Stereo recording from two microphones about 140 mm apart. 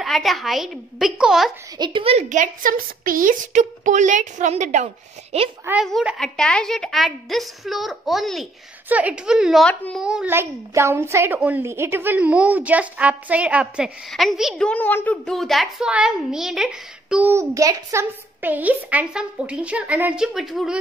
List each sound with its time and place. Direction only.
0.0 s a woman's voice: centre (ahead or behind)
1.8 s a woman's voice: 35° right (ahead or behind)
2.2 s a woman's voice: 65° right (ahead or behind); by 5.5 s 50° right (ahead or behind)
5.9 s a woman's voice: centre (ahead or behind)
10.0 s a woman's voice: 5° right (ahead or behind)
10.3 s a woman's voice: 20° right (ahead or behind); by 14.7 s centre (ahead or behind)
14.7 s a woman's voice: 15° left (ahead or behind)
15.2 s a woman's voice: centre (ahead or behind)
17.3 s a woman's voice: 20° right (ahead or behind)
18.4 s a woman's voice: 10° right (ahead or behind)